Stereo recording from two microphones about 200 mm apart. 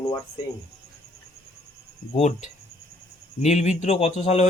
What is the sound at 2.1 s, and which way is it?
Speech, 35° left (ahead or behind).